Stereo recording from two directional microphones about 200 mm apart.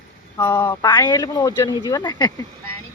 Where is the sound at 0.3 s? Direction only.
15° left (ahead or behind).